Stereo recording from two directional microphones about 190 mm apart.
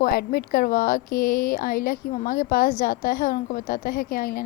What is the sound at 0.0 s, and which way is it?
A woman's voice, 50° left (ahead or behind).